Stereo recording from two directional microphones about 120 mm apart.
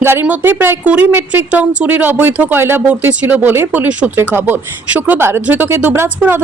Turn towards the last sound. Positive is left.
turn(degrees=-20)  # may be behind; listen again after turning